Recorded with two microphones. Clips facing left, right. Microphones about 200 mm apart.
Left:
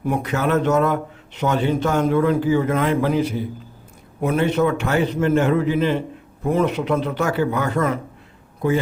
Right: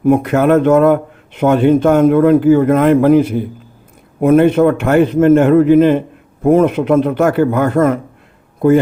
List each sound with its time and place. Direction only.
0.0 s a man's voice: 50° right (ahead or behind)